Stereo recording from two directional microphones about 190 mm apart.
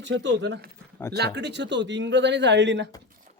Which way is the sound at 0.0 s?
70° right (ahead or behind).